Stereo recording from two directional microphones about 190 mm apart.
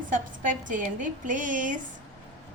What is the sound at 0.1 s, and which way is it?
A woman's voice, 45° right (ahead or behind).